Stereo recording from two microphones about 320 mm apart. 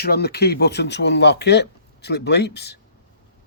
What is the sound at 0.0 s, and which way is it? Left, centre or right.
Speech, left.